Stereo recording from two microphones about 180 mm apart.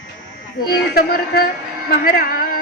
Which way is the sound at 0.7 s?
60° left (ahead or behind).